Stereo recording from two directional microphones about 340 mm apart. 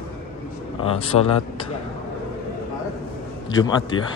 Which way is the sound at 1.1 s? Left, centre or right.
Left.